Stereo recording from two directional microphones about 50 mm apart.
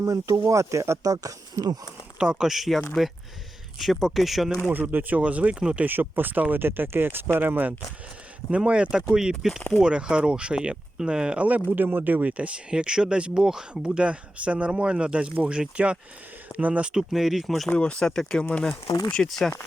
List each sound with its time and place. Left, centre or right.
0.0 s speech: right
2.1 s speech: centre
4.7 s speech: right
5.8 s speech: right
8.4 s speech: right
11.4 s speech: right
16.5 s speech: right
16.9 s speech: centre
17.7 s speech: left
18.0 s speech: centre